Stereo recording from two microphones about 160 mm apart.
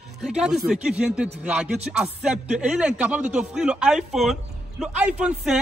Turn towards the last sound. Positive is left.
turn(degrees=-5)  # may be behind; listen again after turning